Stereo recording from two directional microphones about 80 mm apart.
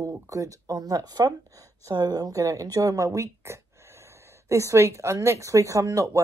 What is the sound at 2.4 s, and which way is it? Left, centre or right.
Speech, right.